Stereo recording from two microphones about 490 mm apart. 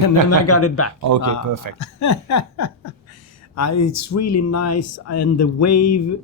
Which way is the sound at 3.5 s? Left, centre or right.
Left.